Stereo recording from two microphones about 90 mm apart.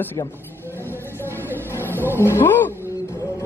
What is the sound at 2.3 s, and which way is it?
Speech, 25° left (ahead or behind).